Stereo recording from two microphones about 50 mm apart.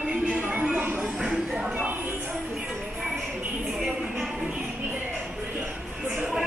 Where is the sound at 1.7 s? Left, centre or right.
Right.